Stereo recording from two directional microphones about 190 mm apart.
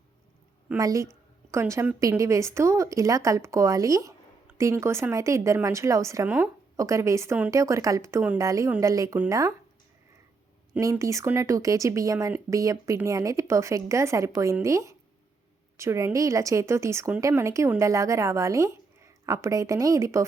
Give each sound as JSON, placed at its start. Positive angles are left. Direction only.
{"t": 0.8, "sound": "speech", "side_deg": -15}
{"t": 10.8, "sound": "speech", "side_deg": -15}